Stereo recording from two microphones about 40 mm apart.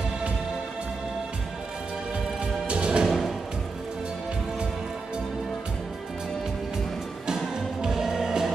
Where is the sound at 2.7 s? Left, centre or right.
Right.